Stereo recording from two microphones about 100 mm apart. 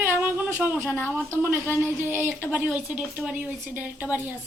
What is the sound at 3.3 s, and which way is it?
Speech, 15° right (ahead or behind).